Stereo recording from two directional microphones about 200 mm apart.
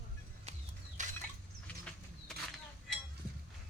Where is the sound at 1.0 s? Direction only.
40° right (ahead or behind).